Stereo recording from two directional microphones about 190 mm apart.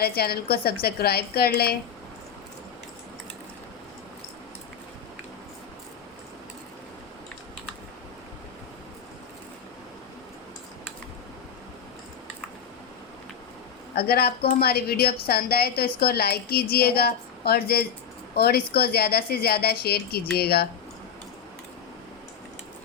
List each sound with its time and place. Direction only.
0.0 s a woman's voice: 55° left (ahead or behind)
13.9 s a woman's voice: 55° left (ahead or behind)